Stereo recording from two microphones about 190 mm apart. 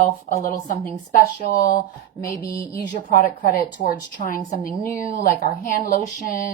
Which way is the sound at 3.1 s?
50° left (ahead or behind).